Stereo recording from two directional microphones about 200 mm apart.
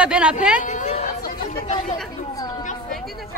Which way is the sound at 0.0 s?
5° right (ahead or behind).